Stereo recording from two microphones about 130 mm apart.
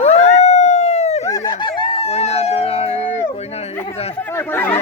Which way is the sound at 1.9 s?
50° left (ahead or behind).